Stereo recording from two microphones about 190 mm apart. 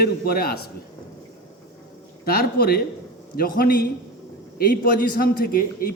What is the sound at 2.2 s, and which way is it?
A man's voice, 50° left (ahead or behind).